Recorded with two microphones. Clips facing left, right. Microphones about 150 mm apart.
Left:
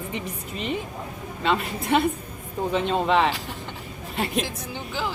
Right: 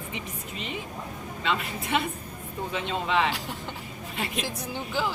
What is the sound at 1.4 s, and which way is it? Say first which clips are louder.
A woman's voice: left 5 dB; 40° left (ahead or behind).